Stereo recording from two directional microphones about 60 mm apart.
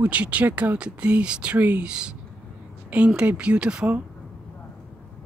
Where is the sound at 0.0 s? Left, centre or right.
Right.